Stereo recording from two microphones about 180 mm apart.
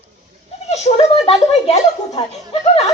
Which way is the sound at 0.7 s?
35° left (ahead or behind).